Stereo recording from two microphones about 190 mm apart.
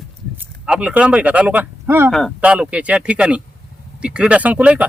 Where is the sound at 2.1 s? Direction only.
Centre (ahead or behind).